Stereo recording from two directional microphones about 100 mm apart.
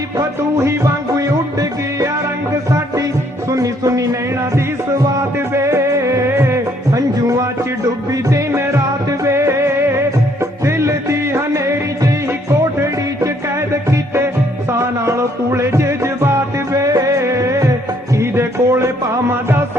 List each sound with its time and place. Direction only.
3.5 s music: 35° right (ahead or behind)
5.5 s music: 30° right (ahead or behind)
14.7 s music: 30° right (ahead or behind)